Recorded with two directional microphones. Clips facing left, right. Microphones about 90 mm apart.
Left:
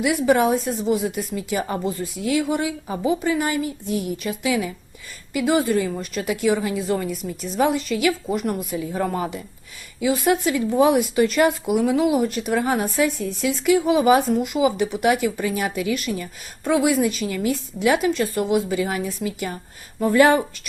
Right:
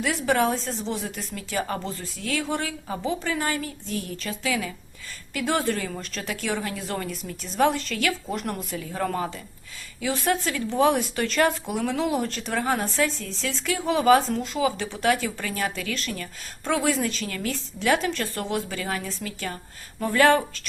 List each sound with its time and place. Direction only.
0.3 s speech: 10° left (ahead or behind)